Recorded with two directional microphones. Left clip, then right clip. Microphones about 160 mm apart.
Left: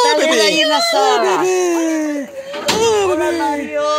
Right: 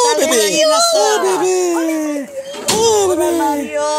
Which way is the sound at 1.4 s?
5° right (ahead or behind).